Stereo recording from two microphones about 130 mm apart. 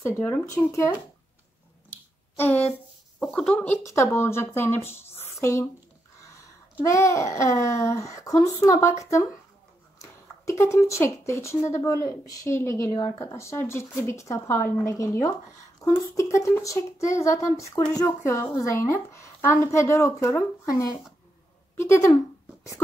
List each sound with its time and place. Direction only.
0.0 s speech: 15° left (ahead or behind)
1.9 s a sound: 15° left (ahead or behind)
3.2 s speech: 5° left (ahead or behind)
5.2 s a sound: 20° left (ahead or behind)
6.8 s speech: 25° left (ahead or behind)
10.6 s speech: 25° left (ahead or behind)